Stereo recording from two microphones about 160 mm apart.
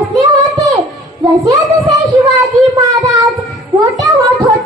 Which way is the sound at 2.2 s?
20° right (ahead or behind).